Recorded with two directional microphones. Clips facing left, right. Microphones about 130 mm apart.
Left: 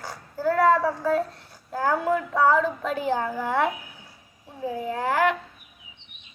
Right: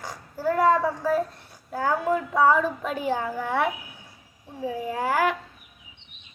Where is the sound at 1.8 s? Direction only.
15° right (ahead or behind).